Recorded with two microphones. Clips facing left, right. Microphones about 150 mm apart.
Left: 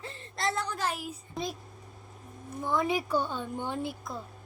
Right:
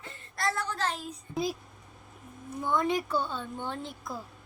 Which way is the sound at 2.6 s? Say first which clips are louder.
Even; 5° left (ahead or behind).